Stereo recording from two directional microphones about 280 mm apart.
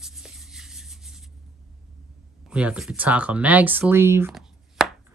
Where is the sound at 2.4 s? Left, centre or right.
Centre.